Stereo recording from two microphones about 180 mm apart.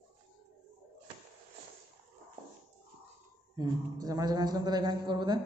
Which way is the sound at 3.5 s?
20° right (ahead or behind).